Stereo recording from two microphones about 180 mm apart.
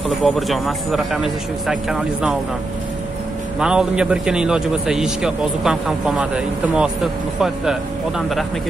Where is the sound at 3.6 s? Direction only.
5° right (ahead or behind).